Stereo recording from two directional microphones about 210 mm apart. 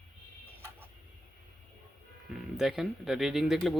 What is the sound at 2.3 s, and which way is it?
Speech, centre (ahead or behind).